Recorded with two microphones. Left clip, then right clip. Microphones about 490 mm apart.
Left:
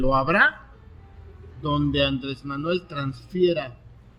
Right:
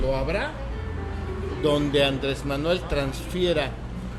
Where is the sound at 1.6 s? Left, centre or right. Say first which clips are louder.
Right 2 dB; left.